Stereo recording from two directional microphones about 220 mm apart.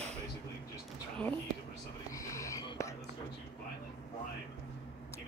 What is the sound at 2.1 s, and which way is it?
Whispering, 15° left (ahead or behind).